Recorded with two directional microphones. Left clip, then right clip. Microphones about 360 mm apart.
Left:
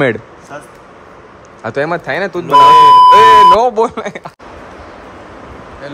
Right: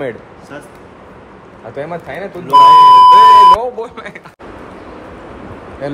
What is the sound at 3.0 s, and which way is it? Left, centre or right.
Beep, left.